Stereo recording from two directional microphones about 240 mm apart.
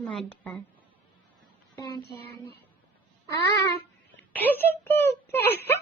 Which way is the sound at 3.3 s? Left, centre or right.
Centre.